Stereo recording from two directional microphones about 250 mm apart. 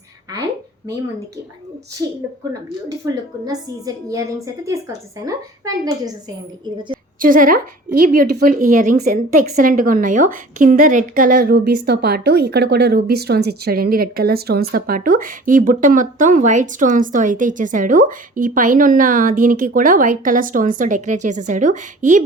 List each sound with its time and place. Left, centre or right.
3.0 s a woman's voice: centre
7.2 s a woman's voice: right